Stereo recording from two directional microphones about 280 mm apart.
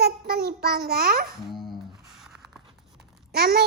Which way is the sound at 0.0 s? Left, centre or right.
Right.